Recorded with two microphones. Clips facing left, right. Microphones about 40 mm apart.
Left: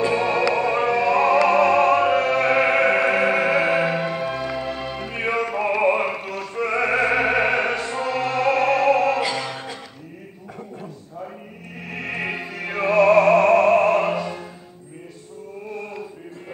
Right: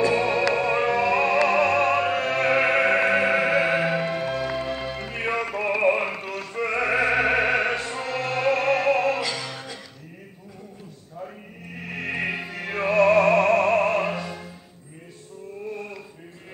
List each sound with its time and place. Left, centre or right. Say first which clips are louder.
0.1 s music: left 2 dB; centre
1.5 s opera: left 4 dB; centre
8.1 s music: left 2 dB; centre
9.2 s music: left 5 dB; left
11.9 s opera: left 1 dB; centre